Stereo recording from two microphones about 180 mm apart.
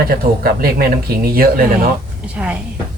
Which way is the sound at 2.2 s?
5° right (ahead or behind).